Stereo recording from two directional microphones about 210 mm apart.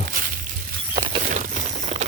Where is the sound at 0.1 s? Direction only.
40° right (ahead or behind).